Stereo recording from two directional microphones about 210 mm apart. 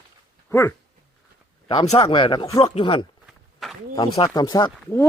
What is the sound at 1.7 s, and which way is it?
Speech, 25° left (ahead or behind).